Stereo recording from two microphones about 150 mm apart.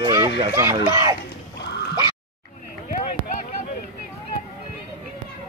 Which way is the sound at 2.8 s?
60° left (ahead or behind).